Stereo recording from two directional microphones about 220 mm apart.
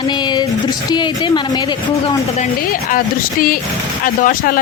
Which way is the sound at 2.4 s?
40° left (ahead or behind).